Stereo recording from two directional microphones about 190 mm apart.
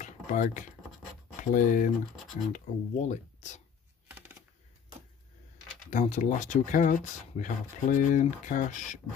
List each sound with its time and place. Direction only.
0.0 s computer keyboard: 40° left (ahead or behind)
1.4 s speech: 45° left (ahead or behind)
5.9 s speech: 40° left (ahead or behind)